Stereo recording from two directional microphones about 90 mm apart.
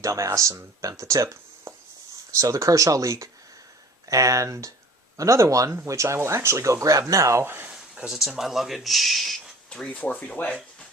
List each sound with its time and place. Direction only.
0.0 s speech: 35° right (ahead or behind)
7.7 s speech: 10° right (ahead or behind); by 10.6 s 15° left (ahead or behind)